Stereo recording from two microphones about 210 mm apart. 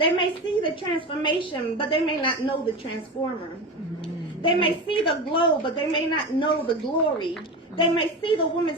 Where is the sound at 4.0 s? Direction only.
25° left (ahead or behind).